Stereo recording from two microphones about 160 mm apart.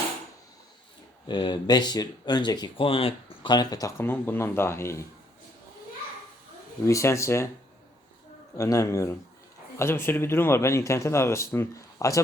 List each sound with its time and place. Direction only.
1.3 s speech: 30° left (ahead or behind)
6.8 s speech: 20° left (ahead or behind)
8.5 s speech: 20° left (ahead or behind)